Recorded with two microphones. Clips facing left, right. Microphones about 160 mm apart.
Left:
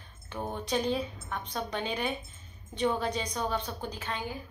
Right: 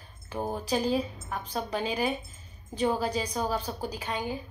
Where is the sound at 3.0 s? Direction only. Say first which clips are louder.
Right 2 dB; 5° right (ahead or behind).